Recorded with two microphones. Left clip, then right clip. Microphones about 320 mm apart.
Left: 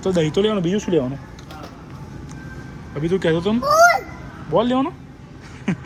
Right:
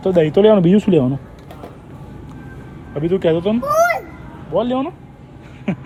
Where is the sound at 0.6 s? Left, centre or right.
Right.